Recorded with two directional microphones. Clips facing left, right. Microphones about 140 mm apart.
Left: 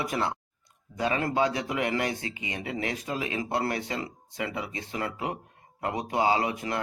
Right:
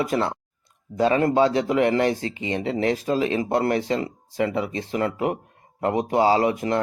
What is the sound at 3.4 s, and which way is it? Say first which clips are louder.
Speech: right 7 dB; 45° right (ahead or behind).